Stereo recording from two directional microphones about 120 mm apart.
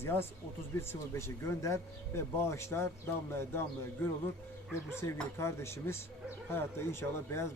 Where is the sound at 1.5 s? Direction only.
25° left (ahead or behind).